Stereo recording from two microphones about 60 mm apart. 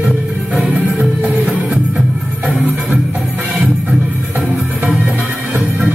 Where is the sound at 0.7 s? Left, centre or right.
Right.